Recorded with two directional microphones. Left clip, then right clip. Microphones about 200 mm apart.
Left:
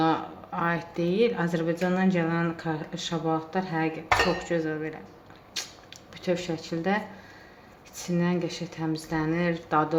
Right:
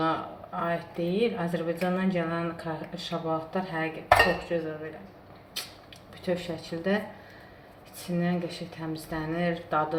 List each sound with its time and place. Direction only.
0.0 s speech: 45° left (ahead or behind)
6.2 s speech: 45° left (ahead or behind)
8.0 s speech: 45° left (ahead or behind)